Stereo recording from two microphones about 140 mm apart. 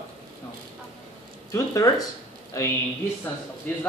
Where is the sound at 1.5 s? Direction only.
25° left (ahead or behind).